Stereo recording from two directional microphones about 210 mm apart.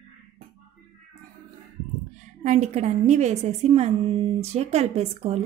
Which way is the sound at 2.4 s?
35° right (ahead or behind).